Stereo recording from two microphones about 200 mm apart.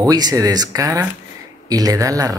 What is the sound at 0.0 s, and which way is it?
Speech, 20° right (ahead or behind).